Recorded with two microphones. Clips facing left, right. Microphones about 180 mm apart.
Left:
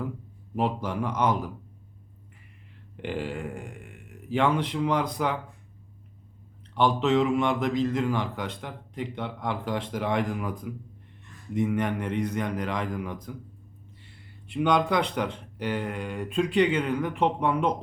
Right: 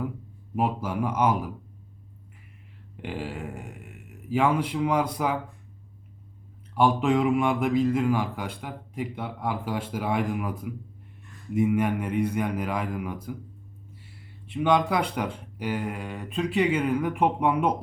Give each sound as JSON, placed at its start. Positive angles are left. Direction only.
{"t": 0.5, "sound": "a man's voice", "side_deg": -5}
{"t": 3.0, "sound": "a man's voice", "side_deg": -5}
{"t": 6.7, "sound": "a man's voice", "side_deg": -10}
{"t": 14.4, "sound": "a man's voice", "side_deg": 0}